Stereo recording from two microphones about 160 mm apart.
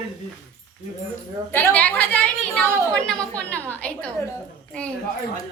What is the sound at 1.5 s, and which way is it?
A woman's voice, 10° left (ahead or behind).